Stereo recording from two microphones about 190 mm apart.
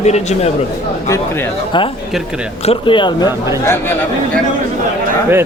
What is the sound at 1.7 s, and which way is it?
Speech, 25° left (ahead or behind).